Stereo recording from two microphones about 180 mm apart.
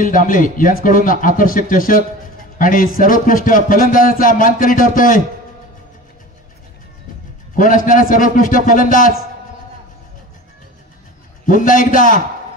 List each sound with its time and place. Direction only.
0.0 s a man's voice: 50° left (ahead or behind)
7.5 s a man's voice: 50° left (ahead or behind)
11.4 s a man's voice: 50° left (ahead or behind)